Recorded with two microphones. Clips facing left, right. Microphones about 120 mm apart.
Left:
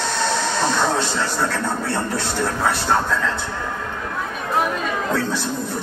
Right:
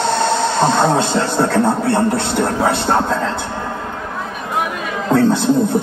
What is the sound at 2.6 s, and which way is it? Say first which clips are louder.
Speech: right 5 dB; 25° right (ahead or behind).